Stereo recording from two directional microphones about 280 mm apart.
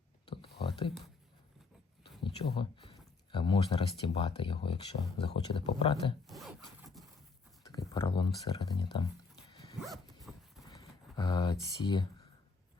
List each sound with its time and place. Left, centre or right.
0.6 s a sound: centre
2.0 s speech: centre
6.2 s zipper: centre
7.6 s a sound: centre
9.8 s dog: centre
10.6 s typing: centre